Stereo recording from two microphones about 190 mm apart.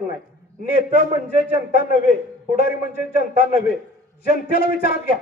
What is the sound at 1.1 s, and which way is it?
A man's voice, 55° left (ahead or behind).